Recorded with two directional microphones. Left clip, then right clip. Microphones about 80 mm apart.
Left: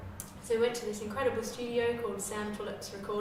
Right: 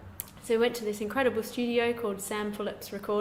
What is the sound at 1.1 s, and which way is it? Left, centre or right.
Speech, right.